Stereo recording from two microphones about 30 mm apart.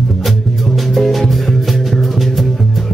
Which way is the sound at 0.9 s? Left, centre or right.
Centre.